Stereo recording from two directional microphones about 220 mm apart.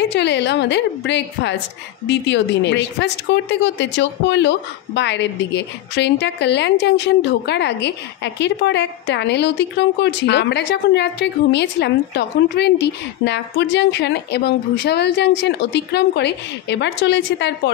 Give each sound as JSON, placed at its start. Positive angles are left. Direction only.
{"t": 0.1, "sound": "speech", "side_deg": 50}